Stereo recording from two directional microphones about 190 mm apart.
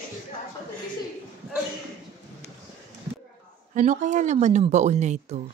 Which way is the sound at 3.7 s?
40° right (ahead or behind).